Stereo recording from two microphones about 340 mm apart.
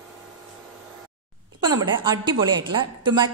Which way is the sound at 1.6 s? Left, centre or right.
Centre.